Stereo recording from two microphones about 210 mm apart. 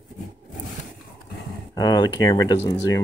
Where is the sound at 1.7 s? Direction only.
20° left (ahead or behind).